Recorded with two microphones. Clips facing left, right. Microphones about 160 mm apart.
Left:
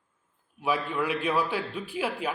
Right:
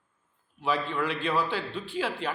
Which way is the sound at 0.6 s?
5° left (ahead or behind).